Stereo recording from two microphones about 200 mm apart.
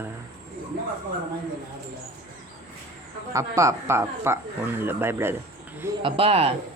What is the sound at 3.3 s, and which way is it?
Speech, 15° right (ahead or behind).